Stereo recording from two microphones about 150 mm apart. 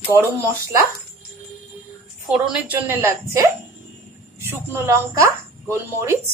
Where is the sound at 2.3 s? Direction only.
10° right (ahead or behind).